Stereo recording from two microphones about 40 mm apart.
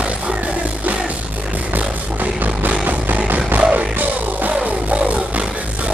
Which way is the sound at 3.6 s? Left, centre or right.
Right.